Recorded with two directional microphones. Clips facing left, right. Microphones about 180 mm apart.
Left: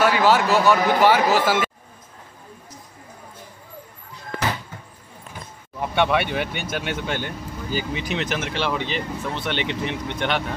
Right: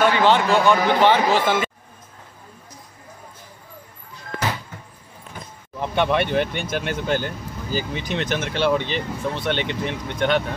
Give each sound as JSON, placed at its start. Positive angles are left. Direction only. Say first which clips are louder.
{"t": 0.0, "sound": "speech", "louder": "right 1 dB", "side_deg": 5}
{"t": 5.8, "sound": "speech", "louder": "even", "side_deg": 5}
{"t": 9.7, "sound": "speech", "louder": "even", "side_deg": -45}